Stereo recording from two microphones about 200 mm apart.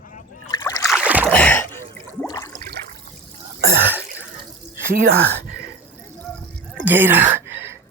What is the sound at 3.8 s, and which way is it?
Sneeze, 10° right (ahead or behind).